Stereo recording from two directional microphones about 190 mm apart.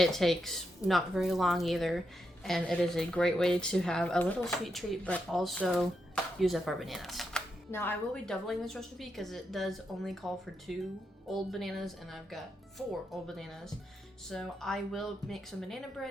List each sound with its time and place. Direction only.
0.0 s a woman's voice: centre (ahead or behind)
7.7 s a woman's voice: 10° left (ahead or behind)